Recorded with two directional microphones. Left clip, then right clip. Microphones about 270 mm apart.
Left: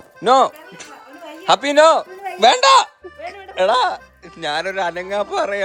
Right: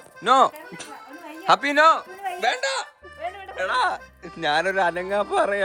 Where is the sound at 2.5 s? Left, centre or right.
Left.